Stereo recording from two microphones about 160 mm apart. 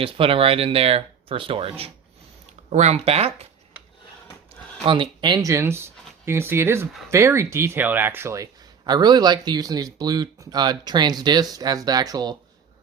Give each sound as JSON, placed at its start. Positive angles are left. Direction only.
{"t": 0.0, "sound": "speech", "side_deg": -35}
{"t": 4.9, "sound": "speech", "side_deg": -30}